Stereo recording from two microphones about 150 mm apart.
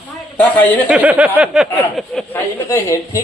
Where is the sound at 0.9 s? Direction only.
10° right (ahead or behind).